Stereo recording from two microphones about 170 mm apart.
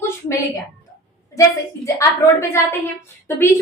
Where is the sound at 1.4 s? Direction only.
20° left (ahead or behind).